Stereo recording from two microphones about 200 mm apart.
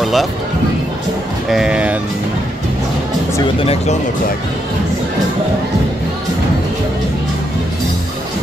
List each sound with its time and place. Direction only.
0.0 s speech: centre (ahead or behind)
1.5 s speech: 5° right (ahead or behind)
3.6 s speech: 30° left (ahead or behind)